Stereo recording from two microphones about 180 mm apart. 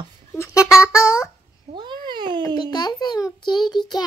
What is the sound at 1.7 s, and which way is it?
Babbling, 25° right (ahead or behind).